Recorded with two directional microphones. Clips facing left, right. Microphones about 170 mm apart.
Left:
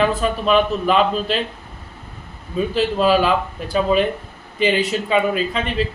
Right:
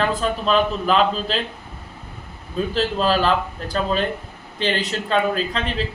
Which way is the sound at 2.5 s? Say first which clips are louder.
Left 3 dB; 5° left (ahead or behind).